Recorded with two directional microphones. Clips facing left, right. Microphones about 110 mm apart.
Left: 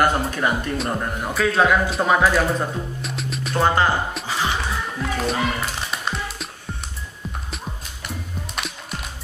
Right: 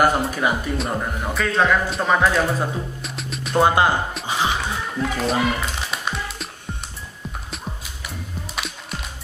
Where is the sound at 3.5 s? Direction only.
15° right (ahead or behind).